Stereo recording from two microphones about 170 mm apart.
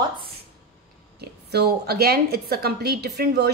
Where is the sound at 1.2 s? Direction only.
70° right (ahead or behind).